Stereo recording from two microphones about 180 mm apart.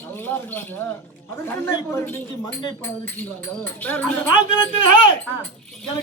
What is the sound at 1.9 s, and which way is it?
Speech, 15° left (ahead or behind).